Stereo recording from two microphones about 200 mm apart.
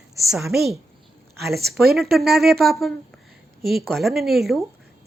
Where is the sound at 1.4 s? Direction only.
55° right (ahead or behind).